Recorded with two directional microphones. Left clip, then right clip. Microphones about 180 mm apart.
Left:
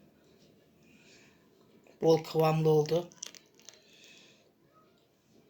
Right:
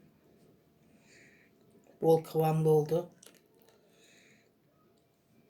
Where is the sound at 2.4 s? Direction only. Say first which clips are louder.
Left 3 dB; 20° left (ahead or behind).